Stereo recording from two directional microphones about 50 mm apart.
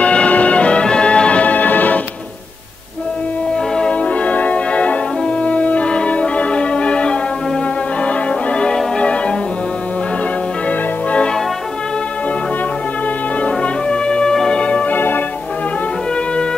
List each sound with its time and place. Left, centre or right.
0.0 s music: left
3.7 s music: left
10.7 s music: left
13.4 s brass instrument: left
14.6 s organ: left
15.0 s music: left